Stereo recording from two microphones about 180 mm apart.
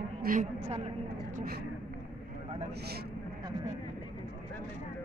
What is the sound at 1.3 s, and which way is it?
Speech, 55° right (ahead or behind).